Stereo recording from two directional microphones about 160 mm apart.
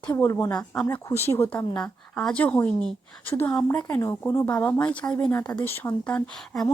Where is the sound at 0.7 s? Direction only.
5° left (ahead or behind).